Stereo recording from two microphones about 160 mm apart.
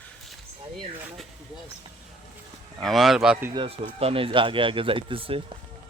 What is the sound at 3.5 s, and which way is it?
Speech, 35° right (ahead or behind).